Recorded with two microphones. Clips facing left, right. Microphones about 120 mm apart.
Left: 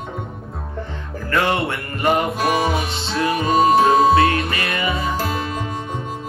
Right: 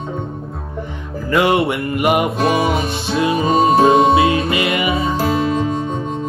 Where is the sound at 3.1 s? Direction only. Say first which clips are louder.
Right 3 dB; 20° right (ahead or behind).